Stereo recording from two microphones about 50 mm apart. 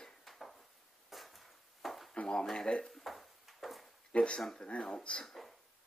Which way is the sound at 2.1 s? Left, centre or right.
Centre.